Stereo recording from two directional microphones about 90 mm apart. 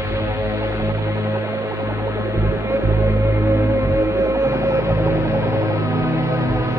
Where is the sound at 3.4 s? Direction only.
30° right (ahead or behind).